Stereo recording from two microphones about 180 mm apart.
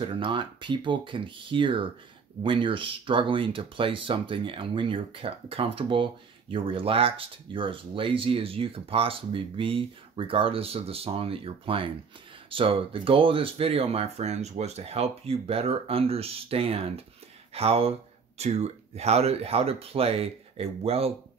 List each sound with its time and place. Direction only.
0.0 s speech: 30° right (ahead or behind)